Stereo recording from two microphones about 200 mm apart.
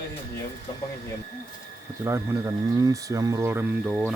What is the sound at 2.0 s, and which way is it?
Speech, 15° right (ahead or behind).